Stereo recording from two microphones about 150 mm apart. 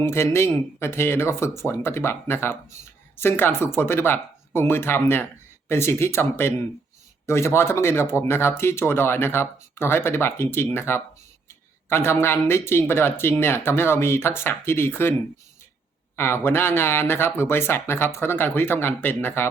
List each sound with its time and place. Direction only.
0.0 s speech: 15° left (ahead or behind)
16.1 s speech: 15° left (ahead or behind)